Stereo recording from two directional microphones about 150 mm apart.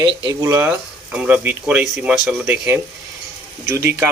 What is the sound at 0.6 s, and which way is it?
Speech, 10° right (ahead or behind).